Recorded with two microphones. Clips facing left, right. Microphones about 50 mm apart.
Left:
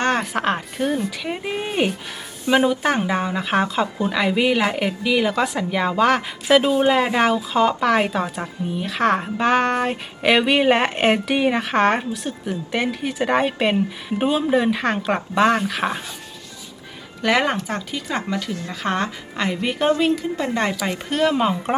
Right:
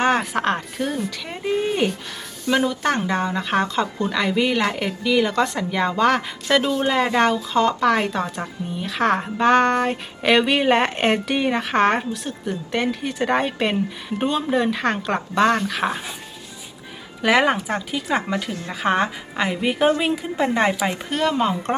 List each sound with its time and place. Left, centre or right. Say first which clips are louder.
0.0 s a woman's voice: right 1 dB; centre
6.6 s a woman's voice: left 2 dB; centre
17.2 s speech: right 2 dB; centre
21.1 s a woman's voice: left 3 dB; centre